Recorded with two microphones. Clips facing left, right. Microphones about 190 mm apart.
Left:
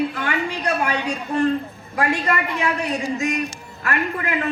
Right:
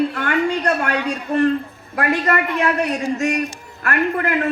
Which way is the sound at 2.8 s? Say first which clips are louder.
Right 3 dB; 70° right (ahead or behind).